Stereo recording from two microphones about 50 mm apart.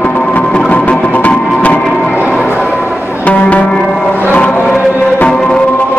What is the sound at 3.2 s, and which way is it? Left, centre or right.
Music, left.